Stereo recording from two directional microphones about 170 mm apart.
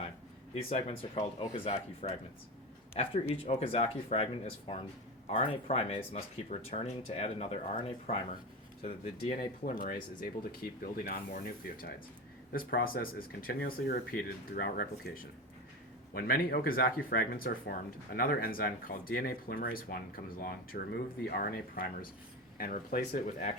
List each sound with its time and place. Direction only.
0.5 s speech: 35° left (ahead or behind)
9.3 s speech: 50° left (ahead or behind)